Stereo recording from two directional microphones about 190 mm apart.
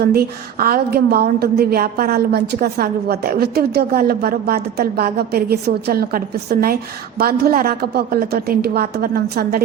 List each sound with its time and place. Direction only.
0.0 s a woman's voice: 55° right (ahead or behind)